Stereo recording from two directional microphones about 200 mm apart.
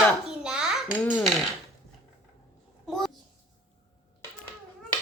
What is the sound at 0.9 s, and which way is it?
Speech, 5° left (ahead or behind).